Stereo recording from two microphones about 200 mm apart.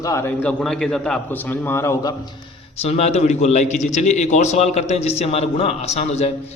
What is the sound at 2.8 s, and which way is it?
A man's voice, 30° left (ahead or behind).